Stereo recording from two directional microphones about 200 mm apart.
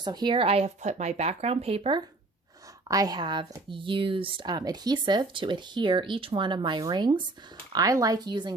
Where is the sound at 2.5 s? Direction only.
15° right (ahead or behind).